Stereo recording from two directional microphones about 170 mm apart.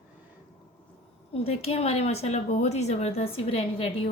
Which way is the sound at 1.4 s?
35° left (ahead or behind).